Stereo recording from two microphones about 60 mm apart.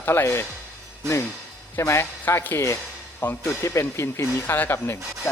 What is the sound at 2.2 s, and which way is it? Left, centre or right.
Speech, left.